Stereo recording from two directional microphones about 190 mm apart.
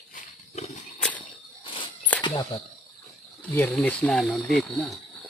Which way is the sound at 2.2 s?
25° left (ahead or behind).